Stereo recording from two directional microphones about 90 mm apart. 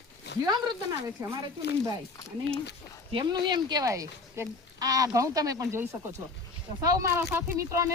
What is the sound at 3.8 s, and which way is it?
Speech, 35° right (ahead or behind).